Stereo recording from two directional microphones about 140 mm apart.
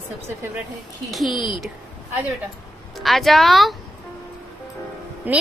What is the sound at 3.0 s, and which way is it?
Speech, centre (ahead or behind).